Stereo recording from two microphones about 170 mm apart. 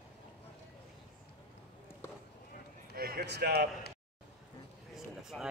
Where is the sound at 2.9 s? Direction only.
65° right (ahead or behind).